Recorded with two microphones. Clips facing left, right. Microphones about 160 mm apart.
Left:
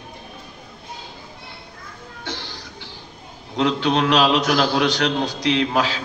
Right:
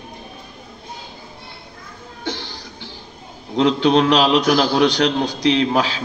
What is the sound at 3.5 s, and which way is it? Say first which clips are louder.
A man's voice: right 5 dB; 20° right (ahead or behind).